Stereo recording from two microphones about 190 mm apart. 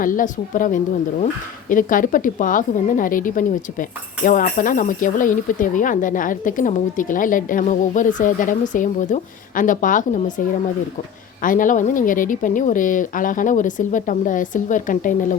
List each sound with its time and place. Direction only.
0.0 s a woman's voice: 45° left (ahead or behind)
11.4 s a woman's voice: 45° left (ahead or behind)